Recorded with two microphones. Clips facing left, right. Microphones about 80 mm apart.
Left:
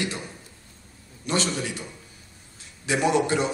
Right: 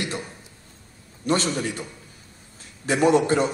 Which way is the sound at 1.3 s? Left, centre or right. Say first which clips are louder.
Right 3 dB; right.